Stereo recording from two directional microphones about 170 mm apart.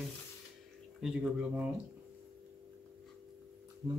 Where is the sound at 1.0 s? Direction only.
5° right (ahead or behind).